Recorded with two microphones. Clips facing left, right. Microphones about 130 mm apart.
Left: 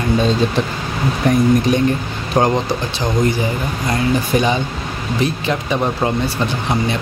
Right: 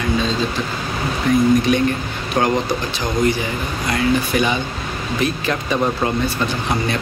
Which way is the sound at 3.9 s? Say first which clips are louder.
Left 1 dB; 30° left (ahead or behind).